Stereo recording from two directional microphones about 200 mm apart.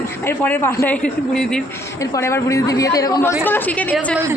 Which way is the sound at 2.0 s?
15° left (ahead or behind).